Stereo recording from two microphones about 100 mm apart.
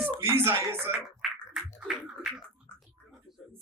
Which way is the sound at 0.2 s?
25° right (ahead or behind).